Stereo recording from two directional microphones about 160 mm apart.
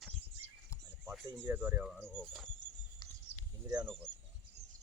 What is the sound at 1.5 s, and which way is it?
Speech, 15° right (ahead or behind).